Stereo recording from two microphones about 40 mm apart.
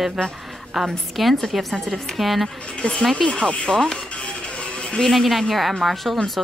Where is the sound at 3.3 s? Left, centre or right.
Left.